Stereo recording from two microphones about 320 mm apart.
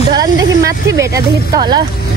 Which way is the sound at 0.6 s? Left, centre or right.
Centre.